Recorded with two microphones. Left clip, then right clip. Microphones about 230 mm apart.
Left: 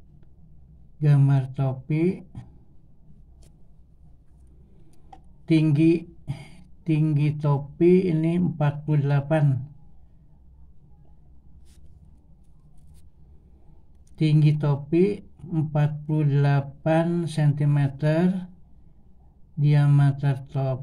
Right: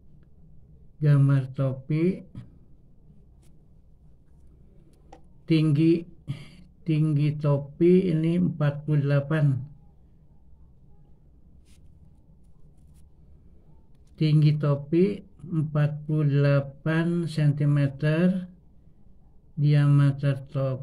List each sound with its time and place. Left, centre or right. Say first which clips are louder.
0.9 s speech: left 1 dB; centre
5.5 s speech: left 2 dB; centre
14.3 s speech: right 2 dB; centre
19.7 s speech: even; centre